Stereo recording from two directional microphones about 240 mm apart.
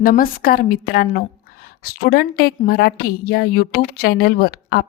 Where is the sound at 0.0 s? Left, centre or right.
Left.